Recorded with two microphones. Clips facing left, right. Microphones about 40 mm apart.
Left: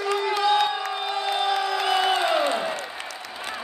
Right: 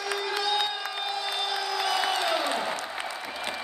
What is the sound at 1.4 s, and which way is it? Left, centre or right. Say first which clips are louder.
Crowd: left 5 dB; left.